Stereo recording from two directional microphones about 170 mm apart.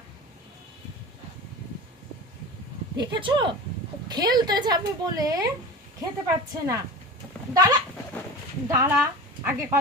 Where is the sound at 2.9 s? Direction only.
25° right (ahead or behind).